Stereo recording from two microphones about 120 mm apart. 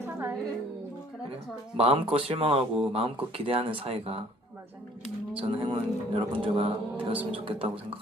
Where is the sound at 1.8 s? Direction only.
55° right (ahead or behind).